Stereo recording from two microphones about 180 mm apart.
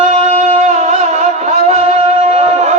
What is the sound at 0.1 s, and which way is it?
Music, 40° right (ahead or behind).